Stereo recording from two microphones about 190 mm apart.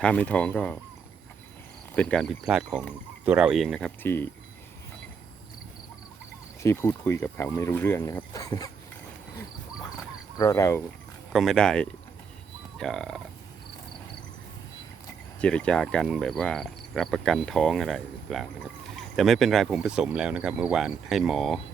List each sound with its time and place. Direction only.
0.0 s speech: 5° left (ahead or behind)
2.0 s cricket: 5° left (ahead or behind)
6.6 s speech: 15° left (ahead or behind)
9.3 s a sound: 15° left (ahead or behind)
10.3 s speech: 15° left (ahead or behind)
11.3 s cricket: centre (ahead or behind)
15.4 s cricket: 5° left (ahead or behind)